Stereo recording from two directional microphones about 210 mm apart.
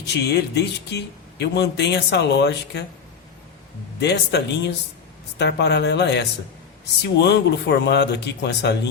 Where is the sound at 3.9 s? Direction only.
55° left (ahead or behind).